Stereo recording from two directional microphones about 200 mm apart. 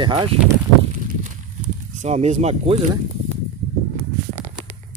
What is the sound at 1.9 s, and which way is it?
Speech, 35° right (ahead or behind).